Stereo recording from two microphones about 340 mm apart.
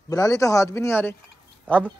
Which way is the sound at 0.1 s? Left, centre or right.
Centre.